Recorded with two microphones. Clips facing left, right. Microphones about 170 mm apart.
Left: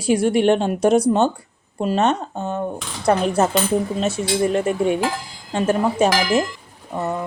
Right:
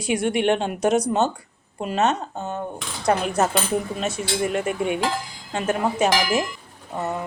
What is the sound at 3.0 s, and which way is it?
Speech, 30° left (ahead or behind).